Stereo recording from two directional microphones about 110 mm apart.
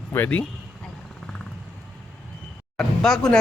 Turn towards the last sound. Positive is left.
turn(degrees=5)  # may be behind; listen again after turning